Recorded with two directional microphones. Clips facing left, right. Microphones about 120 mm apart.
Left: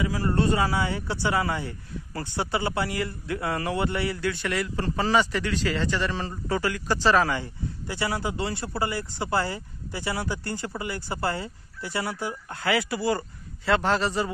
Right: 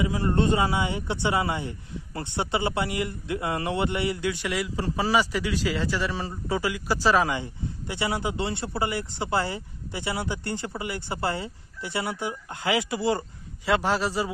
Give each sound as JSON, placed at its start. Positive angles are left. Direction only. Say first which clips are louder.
{"t": 0.0, "sound": "a man's voice", "louder": "right 1 dB", "side_deg": -25}
{"t": 13.7, "sound": "a man's voice", "louder": "left 1 dB", "side_deg": -10}